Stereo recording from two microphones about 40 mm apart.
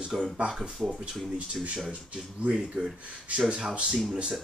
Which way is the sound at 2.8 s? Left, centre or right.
Right.